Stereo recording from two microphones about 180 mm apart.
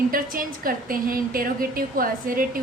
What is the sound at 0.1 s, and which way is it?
A woman's voice, 50° right (ahead or behind).